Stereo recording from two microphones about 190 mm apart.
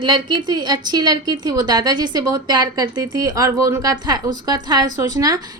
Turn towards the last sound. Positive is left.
turn(degrees=-20)  # may be behind; listen again after turning